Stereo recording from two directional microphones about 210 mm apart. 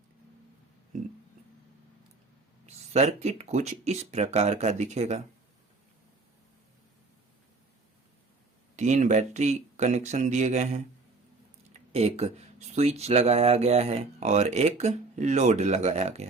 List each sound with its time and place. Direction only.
2.6 s speech: 30° right (ahead or behind)
8.7 s speech: 35° right (ahead or behind)
11.9 s speech: 30° right (ahead or behind)